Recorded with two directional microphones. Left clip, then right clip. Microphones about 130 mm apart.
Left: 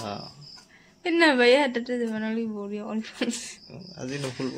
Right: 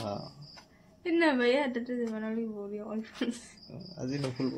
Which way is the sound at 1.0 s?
90° left.